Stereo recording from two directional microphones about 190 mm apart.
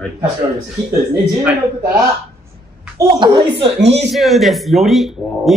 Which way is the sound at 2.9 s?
25° right (ahead or behind).